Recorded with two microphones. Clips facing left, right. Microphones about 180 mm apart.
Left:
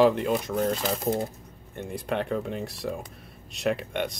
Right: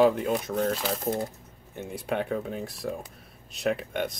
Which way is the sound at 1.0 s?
20° left (ahead or behind).